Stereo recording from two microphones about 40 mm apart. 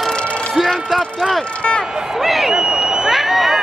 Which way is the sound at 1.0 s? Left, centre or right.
Left.